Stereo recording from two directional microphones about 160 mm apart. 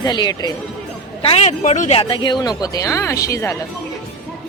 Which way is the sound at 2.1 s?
30° left (ahead or behind).